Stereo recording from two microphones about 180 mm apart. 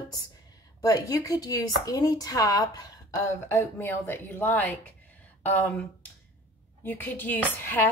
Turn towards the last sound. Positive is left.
turn(degrees=10)  # may be behind; listen again after turning